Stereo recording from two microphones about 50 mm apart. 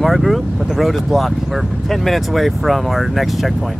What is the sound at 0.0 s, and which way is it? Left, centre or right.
Speech, centre.